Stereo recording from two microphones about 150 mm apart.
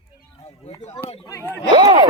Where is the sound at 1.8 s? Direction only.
30° right (ahead or behind).